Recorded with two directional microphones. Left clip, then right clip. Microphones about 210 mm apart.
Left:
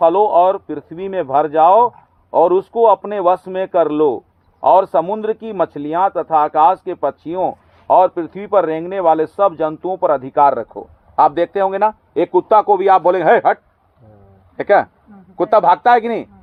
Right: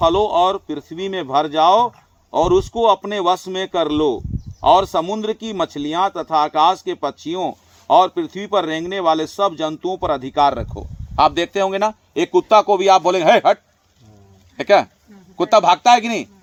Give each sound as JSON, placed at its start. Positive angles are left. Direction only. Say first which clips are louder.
{"t": 0.0, "sound": "a man's voice", "louder": "left 4 dB", "side_deg": -20}
{"t": 14.6, "sound": "a man's voice", "louder": "left 1 dB", "side_deg": -25}